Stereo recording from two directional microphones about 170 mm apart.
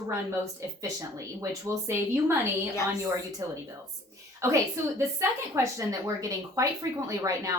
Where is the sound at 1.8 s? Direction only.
15° right (ahead or behind).